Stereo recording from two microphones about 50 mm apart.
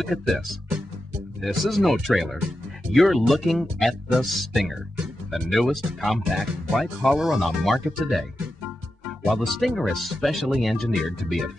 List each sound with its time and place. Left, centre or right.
0.0 s speech: centre
1.4 s speech: centre
9.3 s speech: centre